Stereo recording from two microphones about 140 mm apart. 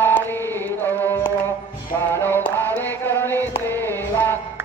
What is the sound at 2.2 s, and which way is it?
Music, 15° left (ahead or behind).